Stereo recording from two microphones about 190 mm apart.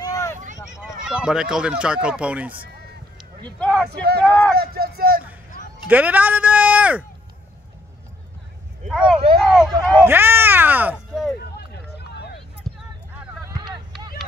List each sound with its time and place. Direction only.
0.0 s vehicle: 15° left (ahead or behind)
0.8 s speech: 5° right (ahead or behind)
3.4 s speech: 5° left (ahead or behind)
3.9 s speech: 55° right (ahead or behind)
5.9 s speech: 10° right (ahead or behind)
8.8 s speech: 5° right (ahead or behind)
10.0 s speech: 10° right (ahead or behind)
11.5 s run: 60° left (ahead or behind)
12.7 s a sound: centre (ahead or behind)
13.5 s a sound: 20° right (ahead or behind)